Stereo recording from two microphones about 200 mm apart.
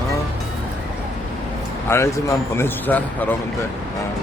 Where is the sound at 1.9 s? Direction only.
10° left (ahead or behind).